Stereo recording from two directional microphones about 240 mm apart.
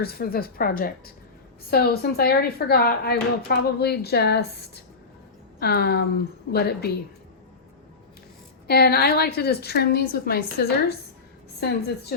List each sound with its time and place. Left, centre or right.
0.0 s a woman's voice: left
8.6 s a woman's voice: left